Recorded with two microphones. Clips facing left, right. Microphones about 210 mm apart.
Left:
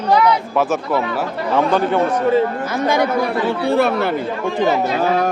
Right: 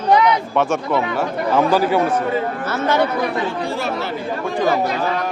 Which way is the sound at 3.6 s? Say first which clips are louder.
Left 7 dB; 60° left (ahead or behind).